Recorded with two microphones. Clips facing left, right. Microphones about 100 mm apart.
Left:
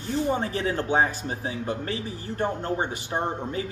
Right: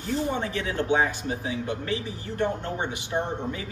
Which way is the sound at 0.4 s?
35° left (ahead or behind).